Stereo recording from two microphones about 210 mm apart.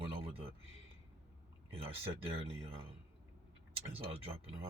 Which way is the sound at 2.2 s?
25° right (ahead or behind).